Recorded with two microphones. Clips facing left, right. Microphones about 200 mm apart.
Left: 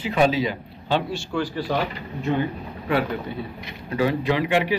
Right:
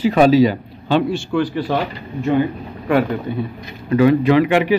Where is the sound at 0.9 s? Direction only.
60° right (ahead or behind).